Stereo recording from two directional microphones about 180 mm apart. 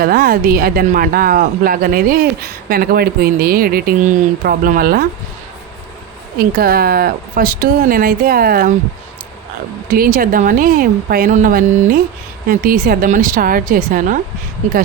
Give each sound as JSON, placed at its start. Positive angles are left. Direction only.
{"t": 0.0, "sound": "speech", "side_deg": -55}
{"t": 6.4, "sound": "speech", "side_deg": -55}
{"t": 9.9, "sound": "speech", "side_deg": -50}